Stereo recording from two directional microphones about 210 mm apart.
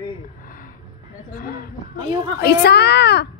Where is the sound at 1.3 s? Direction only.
45° left (ahead or behind).